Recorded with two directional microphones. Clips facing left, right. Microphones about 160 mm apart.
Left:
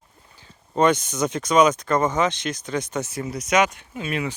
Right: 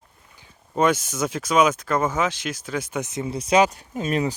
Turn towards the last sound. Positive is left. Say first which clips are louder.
# right 4 dB
turn(degrees=-40)  # may be behind; listen again after turning